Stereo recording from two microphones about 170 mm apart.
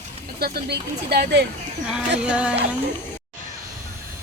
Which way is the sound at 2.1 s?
5° right (ahead or behind).